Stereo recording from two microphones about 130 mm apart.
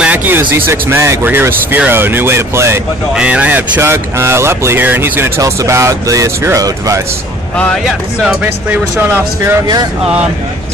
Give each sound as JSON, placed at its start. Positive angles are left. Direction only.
{"t": 0.0, "sound": "speech", "side_deg": -15}
{"t": 7.5, "sound": "speech", "side_deg": 5}